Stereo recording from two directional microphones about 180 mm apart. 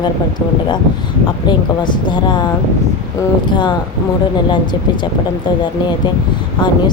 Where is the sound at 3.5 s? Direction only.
25° left (ahead or behind).